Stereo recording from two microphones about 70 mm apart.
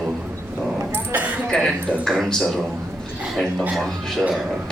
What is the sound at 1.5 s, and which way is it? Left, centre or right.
A man's voice, centre.